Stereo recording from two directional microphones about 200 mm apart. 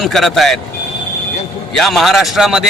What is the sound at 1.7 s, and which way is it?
Speech, centre (ahead or behind).